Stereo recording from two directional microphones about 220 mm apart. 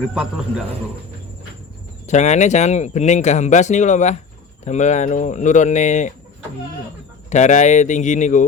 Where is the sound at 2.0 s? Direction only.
30° left (ahead or behind).